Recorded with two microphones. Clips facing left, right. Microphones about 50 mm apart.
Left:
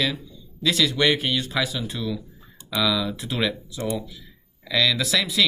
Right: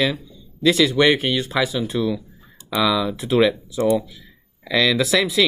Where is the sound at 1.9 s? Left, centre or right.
Right.